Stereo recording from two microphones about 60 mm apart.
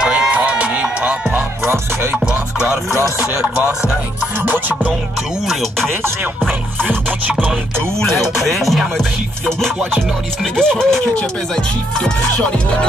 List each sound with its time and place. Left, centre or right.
0.0 s a sound: centre
1.6 s music: right
2.1 s music: centre
4.4 s music: right
5.5 s music: centre
8.5 s music: centre
10.4 s speech: centre